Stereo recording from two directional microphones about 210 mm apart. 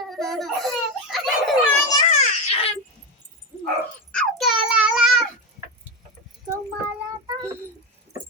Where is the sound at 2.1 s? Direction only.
35° left (ahead or behind).